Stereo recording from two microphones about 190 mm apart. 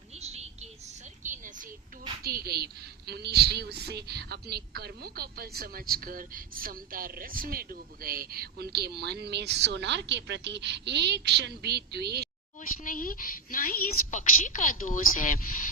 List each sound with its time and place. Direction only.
0.2 s a sound: 35° right (ahead or behind)
2.2 s a woman's voice: 55° right (ahead or behind)
12.6 s a woman's voice: 45° left (ahead or behind)